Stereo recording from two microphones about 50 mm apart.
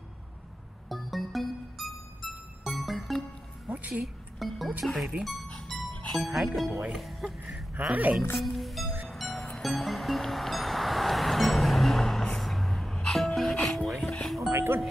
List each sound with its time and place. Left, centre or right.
0.8 s music: centre
3.7 s music: right
4.4 s speech: centre
5.5 s music: centre
6.1 s speech: centre
6.9 s music: centre
7.7 s a woman's voice: right
8.4 s music: centre
12.9 s music: centre
13.2 s music: centre
14.5 s music: right